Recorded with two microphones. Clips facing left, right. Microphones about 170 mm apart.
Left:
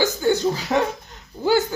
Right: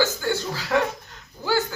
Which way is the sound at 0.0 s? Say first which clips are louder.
Left 5 dB; 20° left (ahead or behind).